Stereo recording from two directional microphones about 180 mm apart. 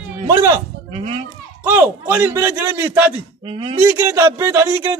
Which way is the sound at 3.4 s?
30° right (ahead or behind).